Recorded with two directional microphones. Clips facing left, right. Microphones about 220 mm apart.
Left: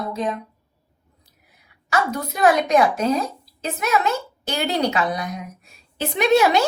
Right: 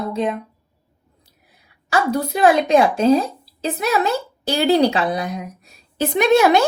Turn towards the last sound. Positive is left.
turn(degrees=-50)  # may be behind; listen again after turning